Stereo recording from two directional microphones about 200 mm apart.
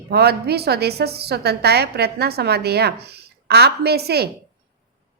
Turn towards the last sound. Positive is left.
turn(degrees=-55)  # may be behind; listen again after turning